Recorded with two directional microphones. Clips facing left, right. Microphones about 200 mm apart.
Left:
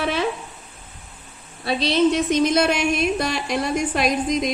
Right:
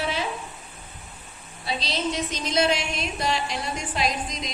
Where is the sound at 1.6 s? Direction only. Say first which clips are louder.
Left 10 dB; 60° left (ahead or behind).